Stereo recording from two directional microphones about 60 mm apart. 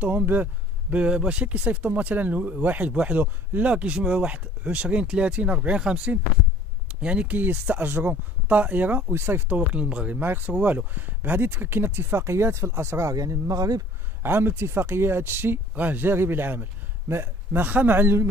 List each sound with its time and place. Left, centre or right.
0.0 s speech: right
7.3 s speech: right
9.1 s speech: right
9.5 s speech: right
10.2 s speech: right
13.1 s speech: right
14.2 s speech: right